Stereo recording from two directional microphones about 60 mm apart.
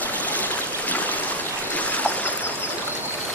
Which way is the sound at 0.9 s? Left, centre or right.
Left.